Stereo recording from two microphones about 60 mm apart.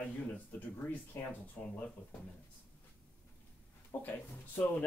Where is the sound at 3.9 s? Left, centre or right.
Left.